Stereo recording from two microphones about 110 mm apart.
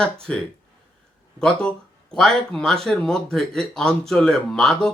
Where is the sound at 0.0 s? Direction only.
5° left (ahead or behind).